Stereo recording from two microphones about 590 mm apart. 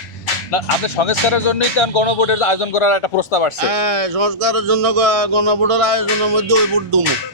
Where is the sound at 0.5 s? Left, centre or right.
Left.